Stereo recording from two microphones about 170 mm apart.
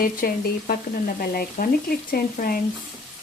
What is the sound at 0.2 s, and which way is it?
Speech, 60° left (ahead or behind).